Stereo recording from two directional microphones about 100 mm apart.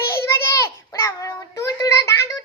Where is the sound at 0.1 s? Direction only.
25° left (ahead or behind).